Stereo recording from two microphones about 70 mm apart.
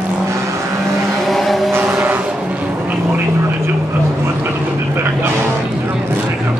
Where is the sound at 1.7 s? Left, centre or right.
Right.